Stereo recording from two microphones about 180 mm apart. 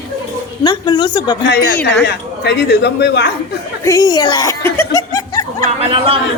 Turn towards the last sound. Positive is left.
turn(degrees=-30)  # may be behind; listen again after turning